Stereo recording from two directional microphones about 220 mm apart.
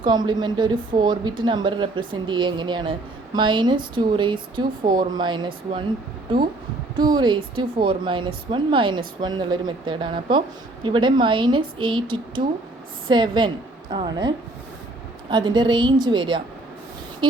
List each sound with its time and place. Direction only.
0.0 s speech: 20° right (ahead or behind)
6.9 s speech: 20° right (ahead or behind)